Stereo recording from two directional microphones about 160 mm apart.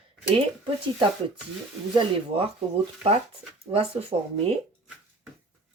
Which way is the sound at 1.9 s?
35° right (ahead or behind).